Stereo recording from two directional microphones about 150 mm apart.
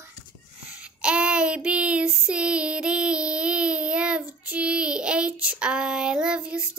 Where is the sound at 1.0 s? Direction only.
5° right (ahead or behind).